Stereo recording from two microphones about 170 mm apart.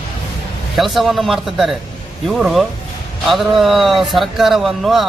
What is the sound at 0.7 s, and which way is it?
Speech, centre (ahead or behind).